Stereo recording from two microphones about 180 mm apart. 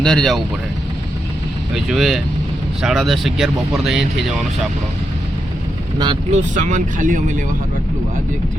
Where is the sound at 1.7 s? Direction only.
Centre (ahead or behind).